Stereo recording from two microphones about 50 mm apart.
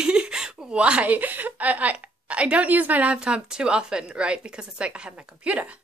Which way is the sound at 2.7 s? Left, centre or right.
Right.